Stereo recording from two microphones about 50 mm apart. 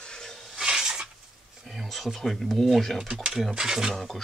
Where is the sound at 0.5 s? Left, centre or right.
Centre.